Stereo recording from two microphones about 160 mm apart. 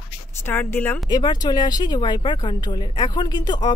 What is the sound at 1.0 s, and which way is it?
Speech, 25° left (ahead or behind).